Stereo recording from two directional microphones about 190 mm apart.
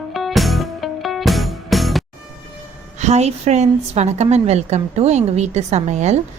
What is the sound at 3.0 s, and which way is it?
A woman's voice, 35° right (ahead or behind).